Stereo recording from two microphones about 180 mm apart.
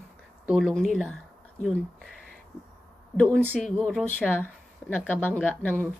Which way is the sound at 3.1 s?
5° left (ahead or behind).